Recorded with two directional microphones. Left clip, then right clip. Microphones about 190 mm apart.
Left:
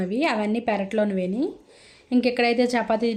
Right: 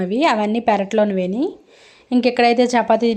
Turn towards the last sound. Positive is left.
turn(degrees=-10)  # may be behind; listen again after turning